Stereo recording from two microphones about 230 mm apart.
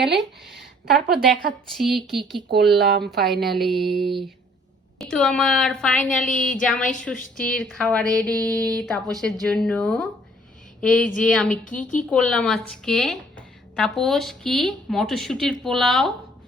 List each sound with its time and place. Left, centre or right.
0.1 s speech: right
1.2 s a woman's voice: centre
2.7 s speech: right
3.4 s a woman's voice: centre
11.8 s speech: left
12.0 s a woman's voice: centre